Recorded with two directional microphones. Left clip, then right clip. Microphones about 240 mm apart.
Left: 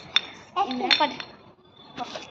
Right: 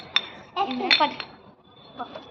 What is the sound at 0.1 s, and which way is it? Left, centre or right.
Chink, centre.